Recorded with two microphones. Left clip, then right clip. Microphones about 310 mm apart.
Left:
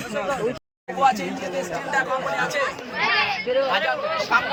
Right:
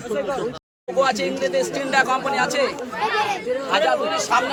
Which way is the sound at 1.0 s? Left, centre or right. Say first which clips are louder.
Even; centre.